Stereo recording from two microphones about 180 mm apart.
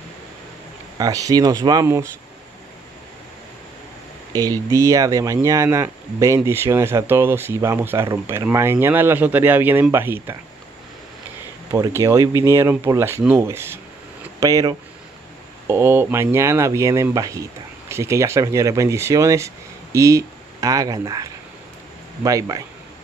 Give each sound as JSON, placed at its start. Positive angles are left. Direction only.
{"t": 0.9, "sound": "speech", "side_deg": -20}
{"t": 4.3, "sound": "speech", "side_deg": -20}
{"t": 11.7, "sound": "speech", "side_deg": -20}